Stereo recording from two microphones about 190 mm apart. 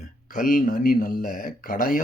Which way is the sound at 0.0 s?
45° left (ahead or behind).